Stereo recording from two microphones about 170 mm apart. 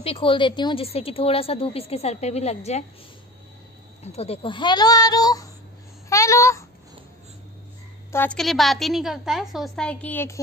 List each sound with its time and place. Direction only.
0.0 s a woman's voice: 35° left (ahead or behind)
4.0 s speech: 40° left (ahead or behind); by 5.5 s 20° left (ahead or behind)
6.0 s a sound: 15° left (ahead or behind)
8.1 s a woman's voice: 10° left (ahead or behind)
8.4 s a woman's voice: centre (ahead or behind)